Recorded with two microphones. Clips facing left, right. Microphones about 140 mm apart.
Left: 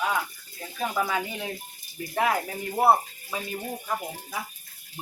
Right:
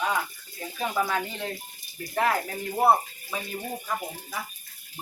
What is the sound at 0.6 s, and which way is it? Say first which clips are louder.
Speech: even; centre (ahead or behind).